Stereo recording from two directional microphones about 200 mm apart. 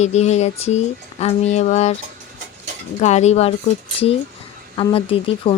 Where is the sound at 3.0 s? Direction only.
35° left (ahead or behind).